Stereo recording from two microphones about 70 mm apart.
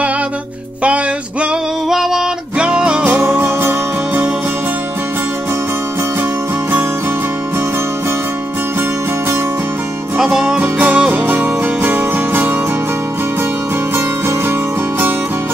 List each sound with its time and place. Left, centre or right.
0.8 s music: centre
1.9 s music: centre
3.1 s music: right
10.1 s music: centre
10.6 s music: right